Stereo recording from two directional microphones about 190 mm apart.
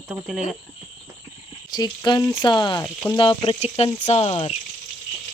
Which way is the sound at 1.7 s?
20° left (ahead or behind).